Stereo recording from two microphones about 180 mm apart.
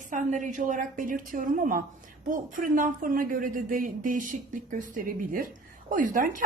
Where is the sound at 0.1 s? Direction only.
45° right (ahead or behind).